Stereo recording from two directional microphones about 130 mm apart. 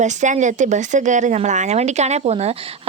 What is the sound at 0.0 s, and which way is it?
Speech, 65° right (ahead or behind).